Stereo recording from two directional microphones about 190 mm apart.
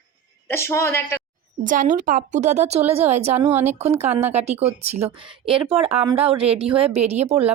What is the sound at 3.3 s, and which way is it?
Speech, 10° right (ahead or behind).